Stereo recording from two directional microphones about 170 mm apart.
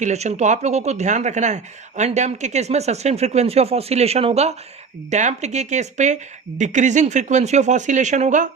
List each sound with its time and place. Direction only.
0.0 s speech: 40° right (ahead or behind)